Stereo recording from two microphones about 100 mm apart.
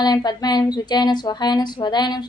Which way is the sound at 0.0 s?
45° left (ahead or behind).